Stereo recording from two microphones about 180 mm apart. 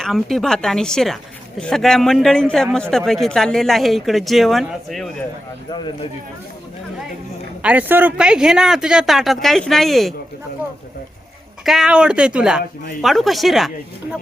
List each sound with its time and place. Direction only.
0.0 s a woman's voice: centre (ahead or behind)
5.7 s speech: 25° left (ahead or behind)
7.6 s a woman's voice: 10° right (ahead or behind)
11.6 s a woman's voice: centre (ahead or behind)